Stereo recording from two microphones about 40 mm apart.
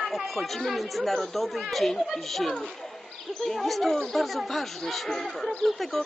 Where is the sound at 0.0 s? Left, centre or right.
Centre.